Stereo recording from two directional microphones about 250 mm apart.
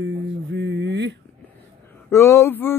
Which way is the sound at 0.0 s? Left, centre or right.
Right.